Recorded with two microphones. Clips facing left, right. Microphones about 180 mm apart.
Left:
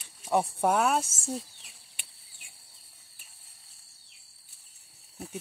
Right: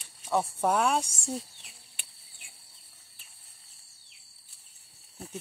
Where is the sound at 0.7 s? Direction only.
5° left (ahead or behind).